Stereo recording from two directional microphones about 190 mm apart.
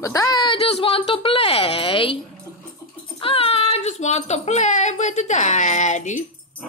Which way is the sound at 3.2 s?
30° left (ahead or behind).